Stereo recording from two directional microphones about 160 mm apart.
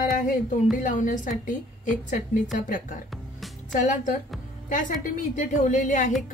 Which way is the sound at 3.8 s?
55° left (ahead or behind).